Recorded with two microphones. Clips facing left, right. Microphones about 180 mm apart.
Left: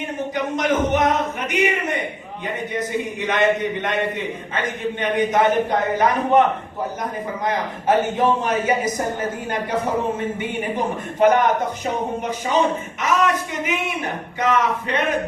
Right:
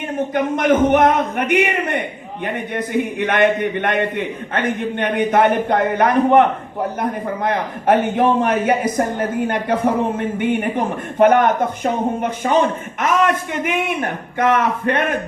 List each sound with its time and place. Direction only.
0.3 s a man's voice: 55° right (ahead or behind)
10.2 s a man's voice: 55° right (ahead or behind)